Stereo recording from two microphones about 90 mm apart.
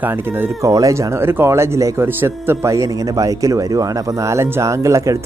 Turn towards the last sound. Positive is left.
turn(degrees=-35)  # may be behind; listen again after turning